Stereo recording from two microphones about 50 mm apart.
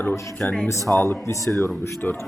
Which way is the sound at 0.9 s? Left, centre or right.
Left.